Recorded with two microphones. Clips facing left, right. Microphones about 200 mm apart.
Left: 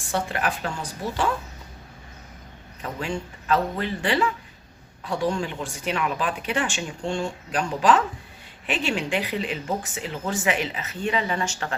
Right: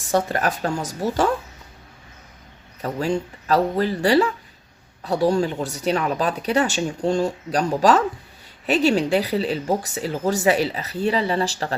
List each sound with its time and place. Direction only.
0.1 s speech: 40° right (ahead or behind)
2.8 s speech: 40° right (ahead or behind)